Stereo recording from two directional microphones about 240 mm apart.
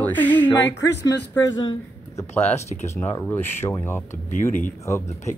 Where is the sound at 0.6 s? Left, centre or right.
Left.